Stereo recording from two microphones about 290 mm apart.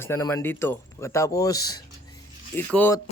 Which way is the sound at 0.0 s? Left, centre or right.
Centre.